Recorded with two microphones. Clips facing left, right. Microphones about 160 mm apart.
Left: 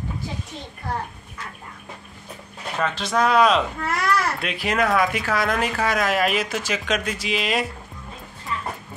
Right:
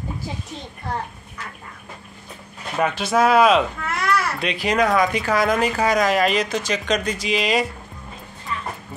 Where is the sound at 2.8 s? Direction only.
10° right (ahead or behind).